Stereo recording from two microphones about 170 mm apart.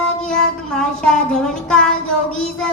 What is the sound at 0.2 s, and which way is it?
Child singing, 5° left (ahead or behind).